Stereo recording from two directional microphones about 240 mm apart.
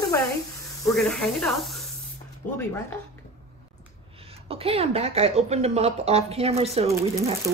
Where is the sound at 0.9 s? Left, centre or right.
Centre.